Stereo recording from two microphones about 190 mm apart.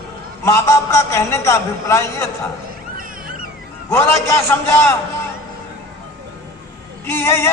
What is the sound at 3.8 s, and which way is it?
Music, 15° left (ahead or behind).